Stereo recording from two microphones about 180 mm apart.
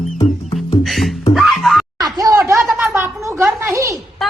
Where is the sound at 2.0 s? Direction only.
20° right (ahead or behind).